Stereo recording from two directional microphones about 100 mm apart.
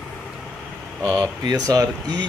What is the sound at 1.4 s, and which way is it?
Speech, 40° right (ahead or behind).